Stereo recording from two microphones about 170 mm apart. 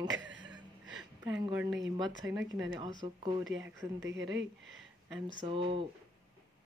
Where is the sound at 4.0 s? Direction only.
90° right.